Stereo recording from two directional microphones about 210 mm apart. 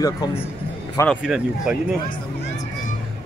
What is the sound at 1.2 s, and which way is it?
Speech, 5° right (ahead or behind).